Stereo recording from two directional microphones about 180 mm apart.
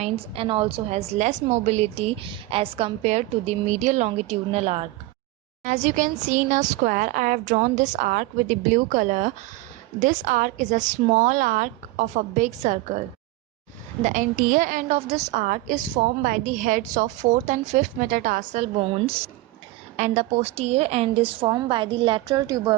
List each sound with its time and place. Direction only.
0.0 s a woman's voice: 30° right (ahead or behind)
14.0 s a woman's voice: 45° right (ahead or behind)
18.8 s a woman's voice: 35° right (ahead or behind)